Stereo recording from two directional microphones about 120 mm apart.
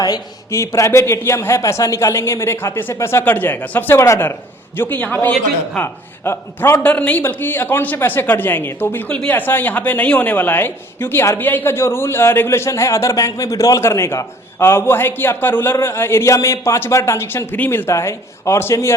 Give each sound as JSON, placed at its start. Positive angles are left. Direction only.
{"t": 0.0, "sound": "a man's voice", "side_deg": 30}